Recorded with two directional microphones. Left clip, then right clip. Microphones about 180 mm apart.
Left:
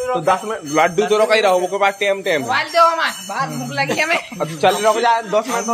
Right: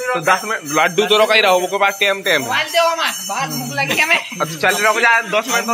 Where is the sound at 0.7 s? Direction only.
5° left (ahead or behind).